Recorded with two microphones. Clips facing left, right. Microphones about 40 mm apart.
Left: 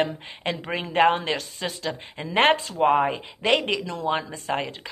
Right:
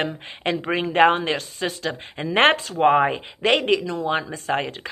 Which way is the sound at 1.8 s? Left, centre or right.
Right.